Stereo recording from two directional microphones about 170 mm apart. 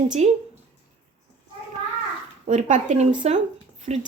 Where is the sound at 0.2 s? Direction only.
40° right (ahead or behind).